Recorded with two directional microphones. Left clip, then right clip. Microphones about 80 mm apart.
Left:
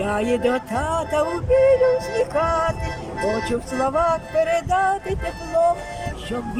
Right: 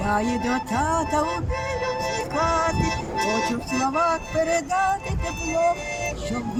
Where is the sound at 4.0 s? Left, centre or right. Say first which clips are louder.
Left 3 dB; left.